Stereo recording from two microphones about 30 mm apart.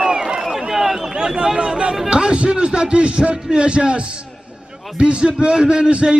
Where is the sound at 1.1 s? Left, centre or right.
Right.